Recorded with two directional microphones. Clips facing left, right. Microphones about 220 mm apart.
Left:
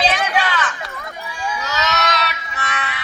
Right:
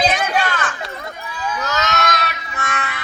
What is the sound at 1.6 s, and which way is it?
Music, 50° right (ahead or behind).